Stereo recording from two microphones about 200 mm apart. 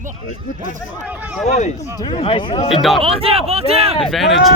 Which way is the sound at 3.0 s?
30° right (ahead or behind).